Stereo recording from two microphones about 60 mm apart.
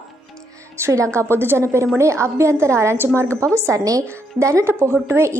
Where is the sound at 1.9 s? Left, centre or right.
Right.